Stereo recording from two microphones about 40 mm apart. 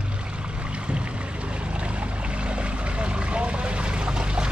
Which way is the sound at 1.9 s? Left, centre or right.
Right.